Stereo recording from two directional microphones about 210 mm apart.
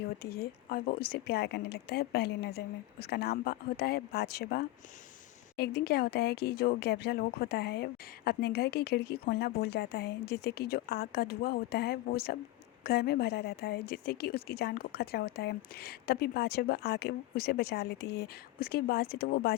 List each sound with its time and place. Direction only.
0.2 s speech: 50° left (ahead or behind)